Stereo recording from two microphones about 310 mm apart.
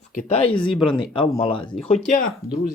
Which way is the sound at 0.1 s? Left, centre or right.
Left.